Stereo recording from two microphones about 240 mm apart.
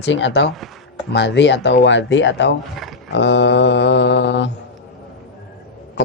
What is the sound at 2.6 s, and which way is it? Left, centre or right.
Speech, centre.